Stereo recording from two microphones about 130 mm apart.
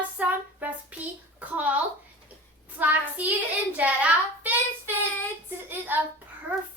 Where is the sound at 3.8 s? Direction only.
10° right (ahead or behind).